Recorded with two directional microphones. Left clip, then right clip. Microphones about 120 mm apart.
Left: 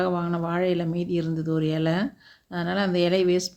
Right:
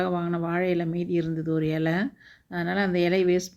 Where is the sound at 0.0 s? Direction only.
25° right (ahead or behind).